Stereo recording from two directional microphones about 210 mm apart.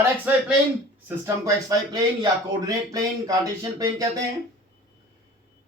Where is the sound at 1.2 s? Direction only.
15° right (ahead or behind).